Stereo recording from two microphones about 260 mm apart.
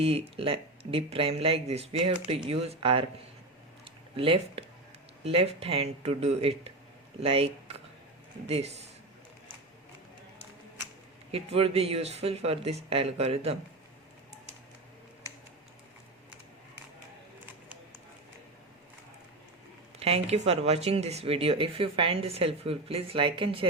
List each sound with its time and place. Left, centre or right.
0.0 s speech: right
3.8 s a sound: right
5.2 s speech: right
11.3 s speech: right
20.0 s speech: right